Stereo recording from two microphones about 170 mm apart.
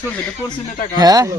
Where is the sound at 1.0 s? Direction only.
20° right (ahead or behind).